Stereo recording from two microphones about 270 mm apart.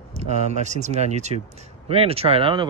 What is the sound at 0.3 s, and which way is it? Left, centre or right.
Speech, right.